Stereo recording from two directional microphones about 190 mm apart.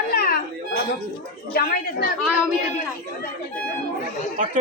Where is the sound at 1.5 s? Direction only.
55° left (ahead or behind).